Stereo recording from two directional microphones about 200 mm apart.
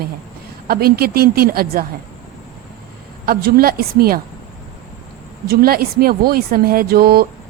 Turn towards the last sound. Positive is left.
turn(degrees=-50)  # may be behind; listen again after turning